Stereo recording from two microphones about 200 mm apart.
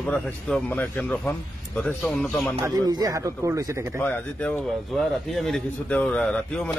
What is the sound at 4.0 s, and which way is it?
A man's voice, 5° left (ahead or behind).